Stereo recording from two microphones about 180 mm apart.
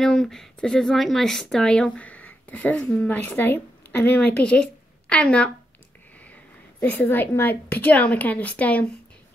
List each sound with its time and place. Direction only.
0.0 s speech: 5° left (ahead or behind)
6.8 s a woman's voice: 10° left (ahead or behind)